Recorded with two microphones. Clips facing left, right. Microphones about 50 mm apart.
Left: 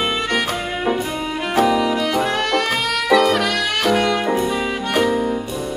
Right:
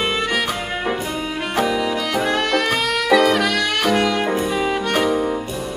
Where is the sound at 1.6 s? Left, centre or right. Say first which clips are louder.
Left 4 dB; centre.